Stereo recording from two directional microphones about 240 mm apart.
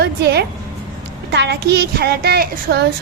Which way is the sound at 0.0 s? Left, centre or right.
Right.